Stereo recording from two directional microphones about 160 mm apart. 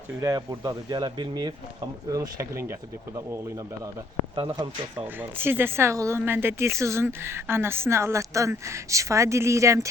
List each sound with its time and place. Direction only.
0.2 s speech: 20° right (ahead or behind)
4.5 s speech: 25° right (ahead or behind)
5.0 s speech: 15° right (ahead or behind)